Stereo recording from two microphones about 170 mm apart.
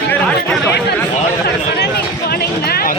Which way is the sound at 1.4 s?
70° left (ahead or behind).